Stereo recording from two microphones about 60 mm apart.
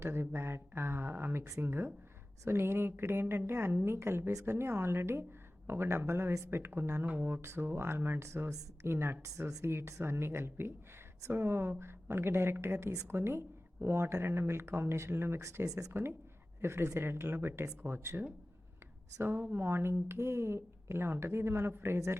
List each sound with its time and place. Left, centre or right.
0.0 s speech: right
4.3 s speech: right
4.5 s speech: right
7.1 s mantra: right
7.4 s speech: right
15.4 s speech: right
15.9 s speech: right
19.4 s speech: right